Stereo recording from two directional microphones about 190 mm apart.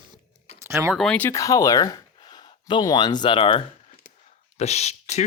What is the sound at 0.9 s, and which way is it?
Speech, 5° left (ahead or behind).